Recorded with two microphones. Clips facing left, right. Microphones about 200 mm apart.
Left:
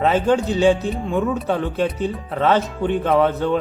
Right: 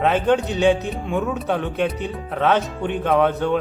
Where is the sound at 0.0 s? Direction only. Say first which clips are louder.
Left 1 dB; centre (ahead or behind).